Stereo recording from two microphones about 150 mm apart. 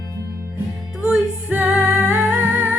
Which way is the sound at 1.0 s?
10° right (ahead or behind).